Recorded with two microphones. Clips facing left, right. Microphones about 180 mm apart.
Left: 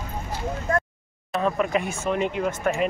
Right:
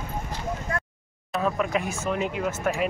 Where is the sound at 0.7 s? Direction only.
45° left (ahead or behind).